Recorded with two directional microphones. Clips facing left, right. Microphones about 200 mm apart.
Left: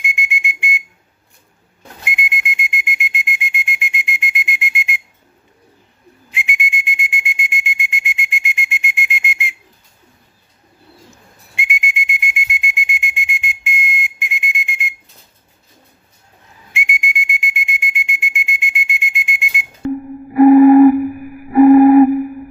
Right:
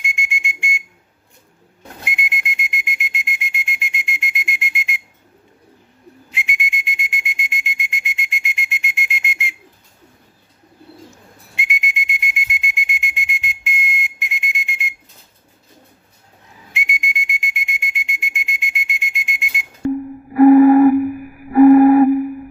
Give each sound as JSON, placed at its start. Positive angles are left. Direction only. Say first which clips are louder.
{"t": 0.0, "sound": "whistle", "louder": "left 3 dB", "side_deg": 0}
{"t": 2.0, "sound": "whistle", "louder": "left 3 dB", "side_deg": 0}
{"t": 6.3, "sound": "whistle", "louder": "left 3 dB", "side_deg": 0}
{"t": 11.5, "sound": "whistle", "louder": "left 2 dB", "side_deg": 0}
{"t": 16.7, "sound": "whistle", "louder": "left 3 dB", "side_deg": 0}
{"t": 20.3, "sound": "music", "louder": "left 2 dB", "side_deg": 15}
{"t": 21.5, "sound": "a sound", "louder": "left 2 dB", "side_deg": 15}